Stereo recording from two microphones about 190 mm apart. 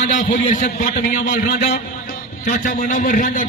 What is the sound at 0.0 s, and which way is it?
A man's voice, 40° left (ahead or behind).